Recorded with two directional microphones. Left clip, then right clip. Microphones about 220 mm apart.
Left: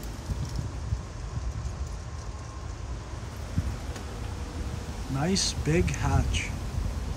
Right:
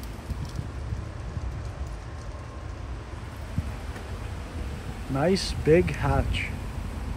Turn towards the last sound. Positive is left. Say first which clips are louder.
# right 3 dB
turn(degrees=5)  # may be behind; listen again after turning